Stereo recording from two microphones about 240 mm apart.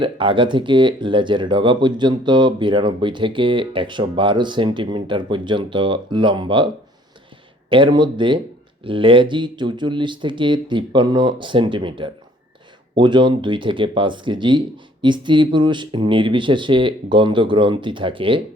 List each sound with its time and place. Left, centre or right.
0.0 s speech: right
7.7 s speech: centre